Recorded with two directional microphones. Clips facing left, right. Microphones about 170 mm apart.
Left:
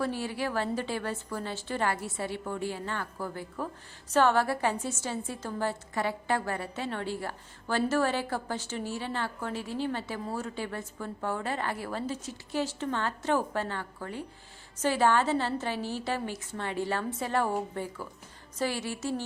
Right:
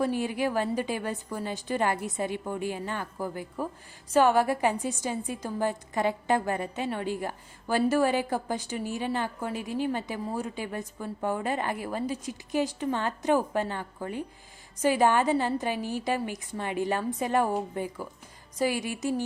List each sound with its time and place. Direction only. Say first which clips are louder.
0.0 s a woman's voice: right 4 dB; 15° right (ahead or behind)